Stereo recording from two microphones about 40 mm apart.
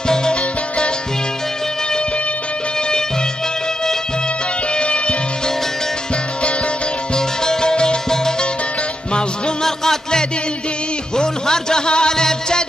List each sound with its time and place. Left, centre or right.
0.1 s music: left
4.7 s music: left
7.2 s music: centre